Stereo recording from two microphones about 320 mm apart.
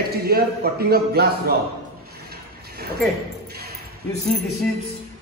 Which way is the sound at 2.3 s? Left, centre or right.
Right.